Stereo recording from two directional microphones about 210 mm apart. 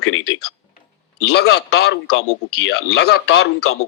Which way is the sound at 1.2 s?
50° left (ahead or behind).